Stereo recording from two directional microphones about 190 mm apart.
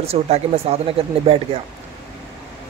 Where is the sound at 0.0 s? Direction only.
30° right (ahead or behind).